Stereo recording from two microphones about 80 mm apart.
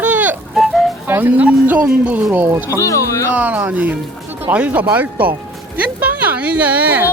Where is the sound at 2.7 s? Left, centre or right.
Left.